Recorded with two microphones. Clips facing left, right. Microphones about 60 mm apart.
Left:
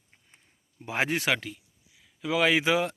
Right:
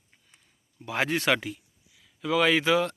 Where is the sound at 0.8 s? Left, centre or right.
Left.